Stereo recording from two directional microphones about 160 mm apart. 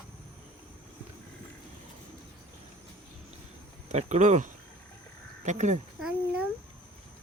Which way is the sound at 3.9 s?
50° right (ahead or behind).